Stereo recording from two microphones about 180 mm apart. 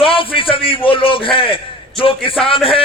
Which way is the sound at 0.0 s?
30° left (ahead or behind).